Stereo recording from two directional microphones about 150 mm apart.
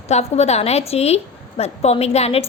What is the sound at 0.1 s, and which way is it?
A woman's voice, 45° left (ahead or behind).